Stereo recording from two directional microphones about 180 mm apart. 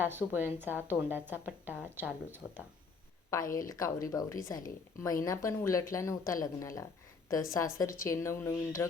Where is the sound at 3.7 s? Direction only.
20° left (ahead or behind).